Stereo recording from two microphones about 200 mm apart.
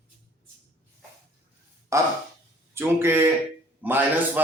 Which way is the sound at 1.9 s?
15° right (ahead or behind).